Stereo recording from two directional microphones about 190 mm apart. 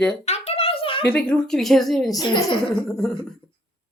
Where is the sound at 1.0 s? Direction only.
10° left (ahead or behind).